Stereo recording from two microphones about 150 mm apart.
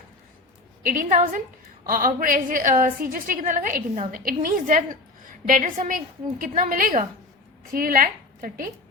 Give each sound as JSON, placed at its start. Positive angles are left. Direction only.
{"t": 0.9, "sound": "a woman's voice", "side_deg": -65}